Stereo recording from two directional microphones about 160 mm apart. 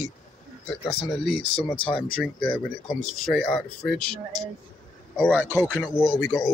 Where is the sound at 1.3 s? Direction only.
35° left (ahead or behind).